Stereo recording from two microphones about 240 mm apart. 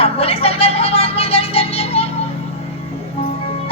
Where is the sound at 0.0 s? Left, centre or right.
Left.